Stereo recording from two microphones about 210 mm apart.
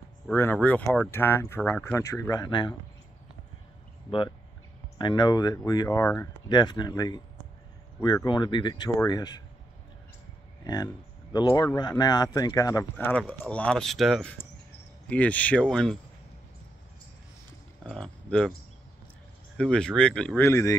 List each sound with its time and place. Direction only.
0.3 s speech: 10° left (ahead or behind)
4.9 s speech: 20° left (ahead or behind)
10.6 s speech: 20° left (ahead or behind)
17.8 s speech: 5° left (ahead or behind)
19.5 s speech: 5° left (ahead or behind)